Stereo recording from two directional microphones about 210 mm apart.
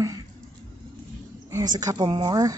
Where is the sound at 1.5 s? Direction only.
15° right (ahead or behind).